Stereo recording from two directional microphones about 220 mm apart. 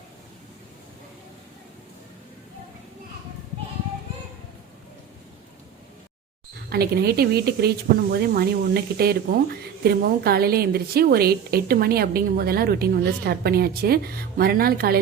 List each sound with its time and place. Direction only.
6.7 s speech: 45° right (ahead or behind)